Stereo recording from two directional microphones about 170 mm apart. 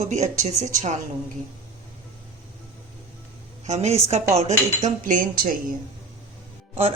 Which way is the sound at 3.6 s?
40° right (ahead or behind).